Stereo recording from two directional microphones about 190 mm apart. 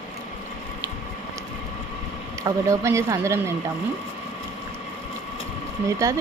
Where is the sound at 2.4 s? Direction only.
15° right (ahead or behind).